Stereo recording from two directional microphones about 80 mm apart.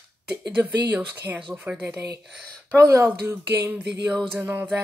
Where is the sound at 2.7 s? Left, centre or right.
Right.